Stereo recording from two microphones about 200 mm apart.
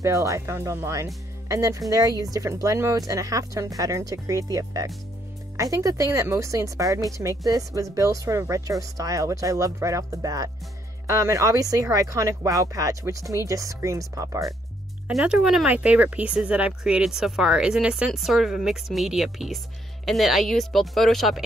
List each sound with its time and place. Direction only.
0.0 s a woman's voice: 15° right (ahead or behind)
15.0 s speech: 5° right (ahead or behind)